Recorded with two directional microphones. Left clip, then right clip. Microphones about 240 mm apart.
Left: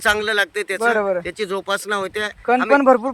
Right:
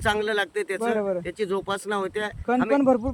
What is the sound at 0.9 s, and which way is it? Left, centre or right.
Speech, left.